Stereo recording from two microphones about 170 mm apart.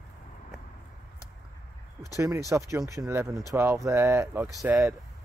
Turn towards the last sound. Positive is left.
turn(degrees=-15)  # may be behind; listen again after turning